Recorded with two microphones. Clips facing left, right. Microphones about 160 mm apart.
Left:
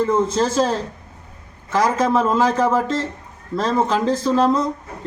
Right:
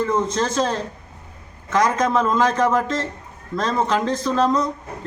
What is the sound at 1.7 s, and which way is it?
Speech, 5° left (ahead or behind).